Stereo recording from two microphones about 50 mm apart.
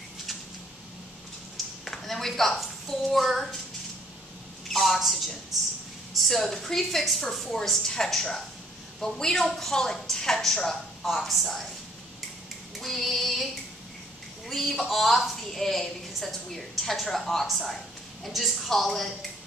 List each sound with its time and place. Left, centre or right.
1.9 s a woman's voice: centre
4.6 s a woman's voice: centre
12.7 s female singing: centre
14.5 s a woman's voice: centre